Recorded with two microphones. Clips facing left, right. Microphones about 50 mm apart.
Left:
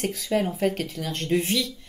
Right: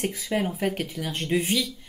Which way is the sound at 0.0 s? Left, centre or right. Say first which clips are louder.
Left 2 dB; centre.